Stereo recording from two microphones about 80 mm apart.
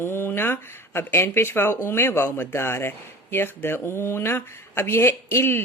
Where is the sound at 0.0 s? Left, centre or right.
Left.